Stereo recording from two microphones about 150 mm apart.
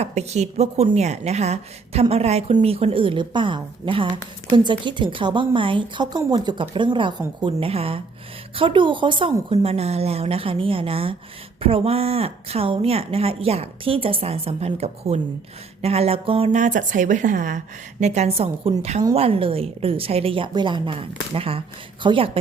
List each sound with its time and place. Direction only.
0.0 s a woman's voice: 45° right (ahead or behind)
16.6 s a woman's voice: 55° right (ahead or behind)
18.0 s a woman's voice: 50° right (ahead or behind)